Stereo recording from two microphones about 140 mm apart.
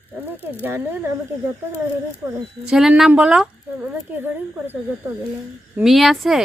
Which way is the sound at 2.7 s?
5° right (ahead or behind).